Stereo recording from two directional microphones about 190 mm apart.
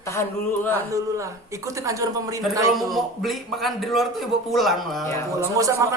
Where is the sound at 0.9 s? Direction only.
15° right (ahead or behind).